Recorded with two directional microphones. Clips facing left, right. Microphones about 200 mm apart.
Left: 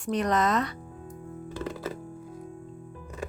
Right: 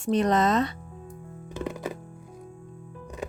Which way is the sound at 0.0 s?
25° right (ahead or behind).